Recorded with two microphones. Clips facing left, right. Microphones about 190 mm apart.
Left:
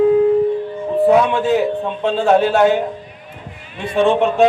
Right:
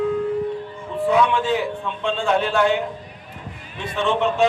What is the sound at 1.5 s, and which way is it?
Speech, 40° left (ahead or behind).